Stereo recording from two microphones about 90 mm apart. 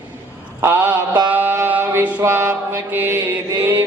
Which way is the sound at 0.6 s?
25° right (ahead or behind).